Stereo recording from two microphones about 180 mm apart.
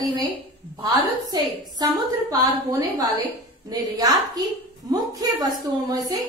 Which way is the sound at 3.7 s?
20° right (ahead or behind).